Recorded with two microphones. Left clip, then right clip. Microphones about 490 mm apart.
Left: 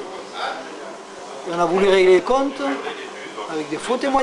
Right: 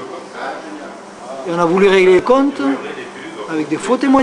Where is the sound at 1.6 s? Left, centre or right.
Right.